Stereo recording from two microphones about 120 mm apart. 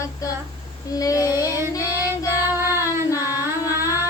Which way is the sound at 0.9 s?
30° left (ahead or behind).